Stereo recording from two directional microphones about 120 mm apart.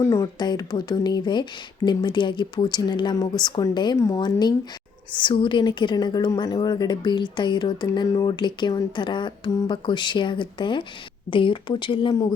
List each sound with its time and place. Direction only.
0.1 s a woman's voice: 30° left (ahead or behind)
3.9 s a woman's voice: 25° left (ahead or behind)
4.2 s a woman's voice: 35° left (ahead or behind)